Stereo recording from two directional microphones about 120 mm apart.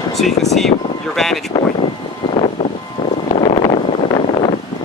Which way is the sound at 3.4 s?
50° left (ahead or behind).